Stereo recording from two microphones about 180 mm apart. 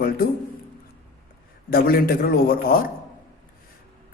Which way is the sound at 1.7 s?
55° left (ahead or behind).